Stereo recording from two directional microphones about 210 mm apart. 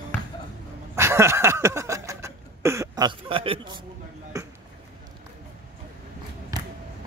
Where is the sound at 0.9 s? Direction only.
10° right (ahead or behind).